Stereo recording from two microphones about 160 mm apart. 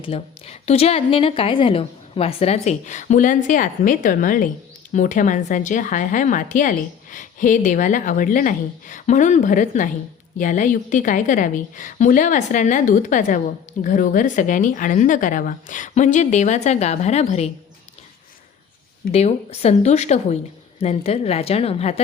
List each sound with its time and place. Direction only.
0.0 s a woman's voice: 40° left (ahead or behind)
19.1 s a woman's voice: 40° left (ahead or behind)